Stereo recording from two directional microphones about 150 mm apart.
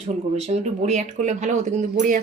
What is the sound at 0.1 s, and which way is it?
Speech, 50° right (ahead or behind).